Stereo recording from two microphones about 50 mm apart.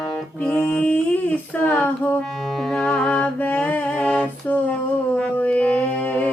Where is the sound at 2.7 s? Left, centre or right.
Centre.